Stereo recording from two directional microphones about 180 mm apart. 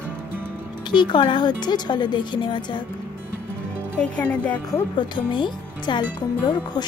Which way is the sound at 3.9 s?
10° left (ahead or behind).